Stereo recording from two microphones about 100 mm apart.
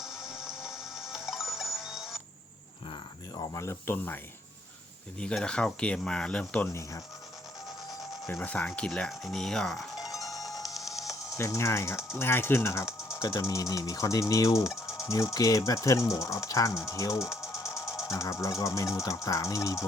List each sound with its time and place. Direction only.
0.0 s music: 5° right (ahead or behind)
2.9 s cricket: 45° left (ahead or behind)
3.5 s speech: 30° left (ahead or behind)
5.2 s speech: 10° left (ahead or behind)
8.3 s speech: 20° left (ahead or behind); by 10.1 s centre (ahead or behind)
10.2 s music: centre (ahead or behind)
11.3 s speech: 30° left (ahead or behind)
11.9 s speech: 5° right (ahead or behind)
12.2 s speech: 25° left (ahead or behind)
14.8 s music: 5° right (ahead or behind)
15.1 s speech: 35° left (ahead or behind)
17.5 s music: 30° left (ahead or behind)
18.1 s speech: 30° left (ahead or behind)